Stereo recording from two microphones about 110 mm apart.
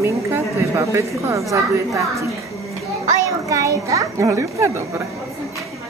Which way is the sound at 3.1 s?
30° right (ahead or behind).